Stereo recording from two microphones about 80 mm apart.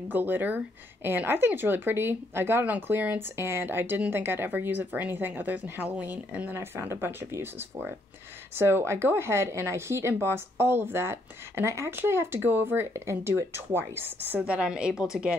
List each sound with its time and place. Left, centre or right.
0.1 s speech: right
2.6 s speech: centre
14.4 s a woman's voice: centre